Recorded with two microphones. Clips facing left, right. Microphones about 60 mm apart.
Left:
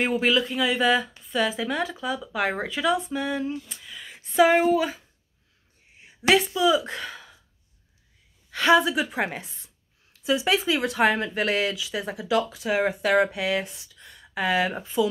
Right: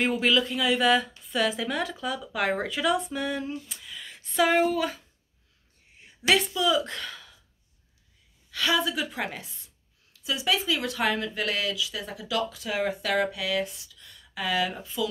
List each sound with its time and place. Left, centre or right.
0.0 s speech: centre
3.8 s speech: centre
8.5 s speech: left